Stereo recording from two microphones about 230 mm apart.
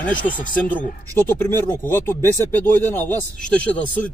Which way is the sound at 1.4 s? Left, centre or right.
Centre.